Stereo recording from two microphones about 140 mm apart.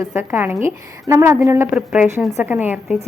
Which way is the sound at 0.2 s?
15° right (ahead or behind).